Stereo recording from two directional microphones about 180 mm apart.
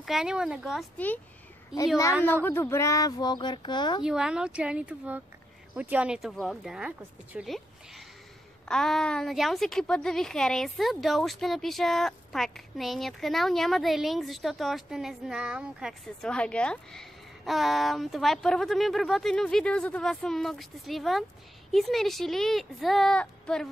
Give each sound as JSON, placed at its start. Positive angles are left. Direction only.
{"t": 0.0, "sound": "a woman's voice", "side_deg": -5}
{"t": 0.9, "sound": "speech", "side_deg": 10}
{"t": 1.7, "sound": "a woman's voice", "side_deg": -5}
{"t": 2.4, "sound": "speech", "side_deg": 15}
{"t": 4.0, "sound": "a woman's voice", "side_deg": -5}
{"t": 8.6, "sound": "a woman's voice", "side_deg": 5}